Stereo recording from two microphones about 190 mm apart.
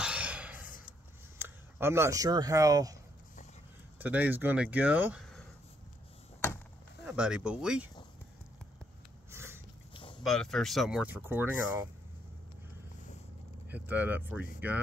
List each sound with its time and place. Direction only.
0.0 s a sound: 5° right (ahead or behind)
1.4 s speech: 15° right (ahead or behind)
4.0 s speech: 10° right (ahead or behind)
7.1 s speech: 5° right (ahead or behind)
9.3 s a sound: 15° right (ahead or behind)
10.2 s speech: centre (ahead or behind)
13.7 s speech: 10° right (ahead or behind)